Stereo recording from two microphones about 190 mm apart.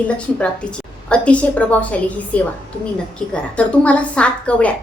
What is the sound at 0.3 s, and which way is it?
A woman's voice, 5° left (ahead or behind).